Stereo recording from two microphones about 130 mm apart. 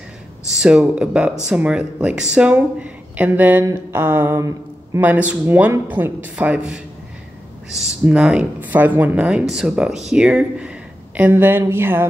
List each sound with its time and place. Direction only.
0.5 s speech: 5° right (ahead or behind)